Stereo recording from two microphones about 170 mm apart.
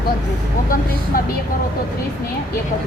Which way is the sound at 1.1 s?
55° left (ahead or behind).